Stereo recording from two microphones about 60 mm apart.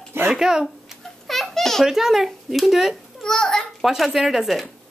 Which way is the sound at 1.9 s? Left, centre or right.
Centre.